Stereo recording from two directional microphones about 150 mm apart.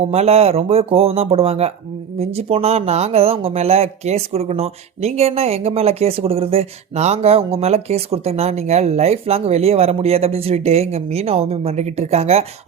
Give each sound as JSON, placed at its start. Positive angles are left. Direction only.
{"t": 0.0, "sound": "speech", "side_deg": -45}